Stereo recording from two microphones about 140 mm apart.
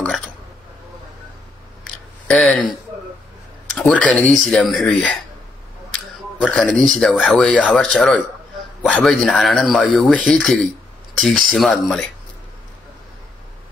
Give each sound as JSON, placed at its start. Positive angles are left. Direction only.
{"t": 2.2, "sound": "speech", "side_deg": 10}
{"t": 3.7, "sound": "speech", "side_deg": 5}
{"t": 6.4, "sound": "speech", "side_deg": 5}